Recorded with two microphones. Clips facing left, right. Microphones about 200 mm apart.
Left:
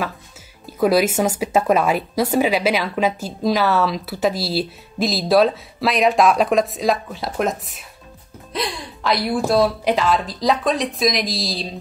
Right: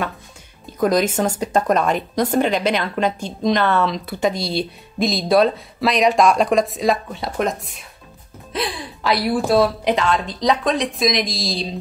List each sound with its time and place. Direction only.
0.7 s speech: 5° left (ahead or behind)